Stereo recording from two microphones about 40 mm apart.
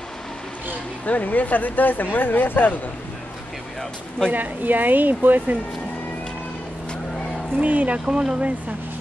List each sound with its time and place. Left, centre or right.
1.0 s speech: left
4.3 s speech: right
7.6 s speech: right
8.0 s speech: centre